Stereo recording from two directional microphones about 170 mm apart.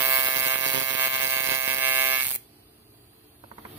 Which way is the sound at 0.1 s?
15° right (ahead or behind).